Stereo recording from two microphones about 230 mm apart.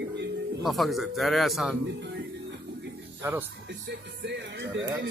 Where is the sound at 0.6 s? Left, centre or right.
Centre.